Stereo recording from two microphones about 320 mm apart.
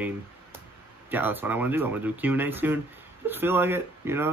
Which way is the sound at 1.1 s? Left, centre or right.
Centre.